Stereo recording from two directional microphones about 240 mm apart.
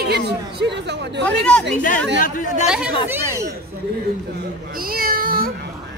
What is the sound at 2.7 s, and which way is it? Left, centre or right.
Speech, centre.